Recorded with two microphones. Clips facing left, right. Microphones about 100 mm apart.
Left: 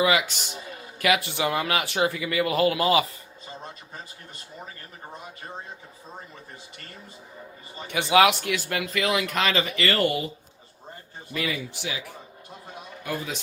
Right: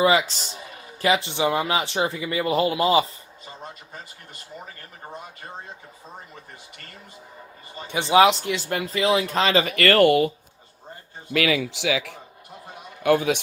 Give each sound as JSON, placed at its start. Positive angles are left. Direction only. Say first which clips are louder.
{"t": 0.0, "sound": "speech", "louder": "right 3 dB", "side_deg": -30}
{"t": 7.8, "sound": "speech", "louder": "right 2 dB", "side_deg": -20}
{"t": 9.6, "sound": "speech", "louder": "right 7 dB", "side_deg": -55}
{"t": 11.3, "sound": "speech", "louder": "right 8 dB", "side_deg": -75}
{"t": 13.0, "sound": "a man's voice", "louder": "right 12 dB", "side_deg": -75}